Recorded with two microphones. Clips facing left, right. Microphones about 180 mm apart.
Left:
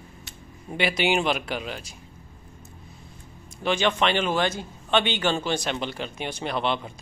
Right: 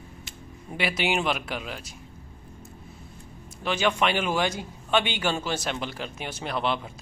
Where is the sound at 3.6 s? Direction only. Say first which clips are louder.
Left 2 dB; 5° right (ahead or behind).